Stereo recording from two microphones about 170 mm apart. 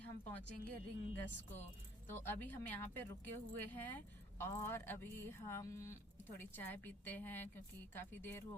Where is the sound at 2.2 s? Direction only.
10° left (ahead or behind).